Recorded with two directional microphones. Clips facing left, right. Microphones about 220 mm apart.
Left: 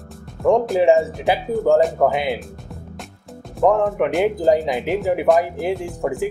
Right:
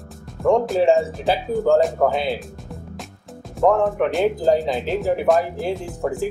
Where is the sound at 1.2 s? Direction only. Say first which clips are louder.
Left 1 dB; 15° left (ahead or behind).